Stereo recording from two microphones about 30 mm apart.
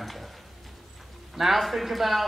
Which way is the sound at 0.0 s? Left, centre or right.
Centre.